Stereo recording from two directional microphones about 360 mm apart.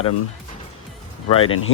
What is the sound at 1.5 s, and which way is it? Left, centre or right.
Speech, left.